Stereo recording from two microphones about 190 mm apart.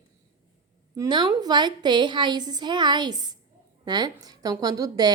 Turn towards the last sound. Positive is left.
turn(degrees=-20)  # may be behind; listen again after turning